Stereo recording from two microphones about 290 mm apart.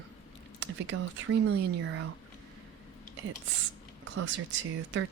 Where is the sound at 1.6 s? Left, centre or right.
Right.